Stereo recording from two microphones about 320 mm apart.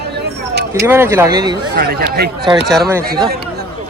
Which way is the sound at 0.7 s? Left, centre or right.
Centre.